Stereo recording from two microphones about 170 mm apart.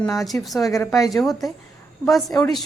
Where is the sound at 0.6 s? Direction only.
20° left (ahead or behind).